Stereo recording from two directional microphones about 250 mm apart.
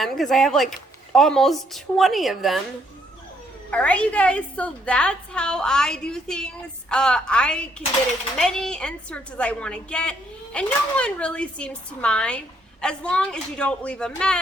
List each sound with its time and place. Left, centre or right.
0.0 s a woman's voice: centre
3.7 s a woman's voice: centre